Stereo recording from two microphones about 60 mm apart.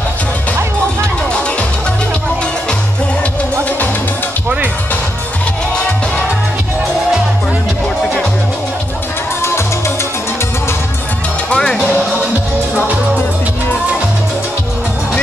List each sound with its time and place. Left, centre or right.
8.0 s music: centre
11.5 s music: centre